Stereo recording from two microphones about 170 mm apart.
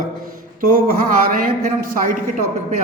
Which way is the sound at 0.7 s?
55° right (ahead or behind).